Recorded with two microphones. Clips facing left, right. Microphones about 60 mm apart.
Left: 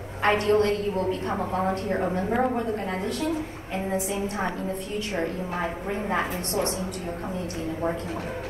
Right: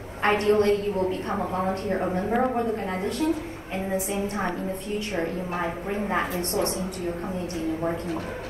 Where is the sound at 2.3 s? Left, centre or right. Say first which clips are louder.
Right 1 dB; centre.